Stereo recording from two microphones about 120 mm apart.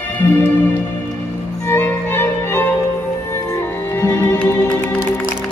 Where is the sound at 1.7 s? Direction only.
20° left (ahead or behind).